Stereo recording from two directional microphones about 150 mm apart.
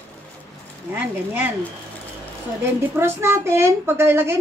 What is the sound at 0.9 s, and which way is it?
Speech, 15° right (ahead or behind).